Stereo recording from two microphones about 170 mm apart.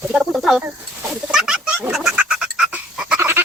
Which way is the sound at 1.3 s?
5° right (ahead or behind).